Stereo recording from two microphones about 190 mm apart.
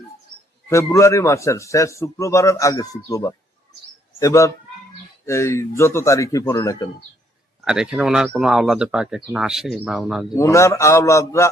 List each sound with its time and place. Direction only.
0.7 s a man's voice: 15° left (ahead or behind)
7.6 s speech: 5° right (ahead or behind)
10.3 s a man's voice: 15° left (ahead or behind)